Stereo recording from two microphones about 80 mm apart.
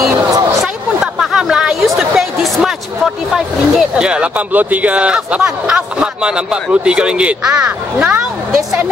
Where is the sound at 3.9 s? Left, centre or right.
Centre.